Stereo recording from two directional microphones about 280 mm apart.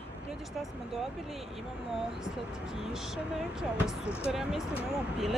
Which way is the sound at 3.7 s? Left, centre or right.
Centre.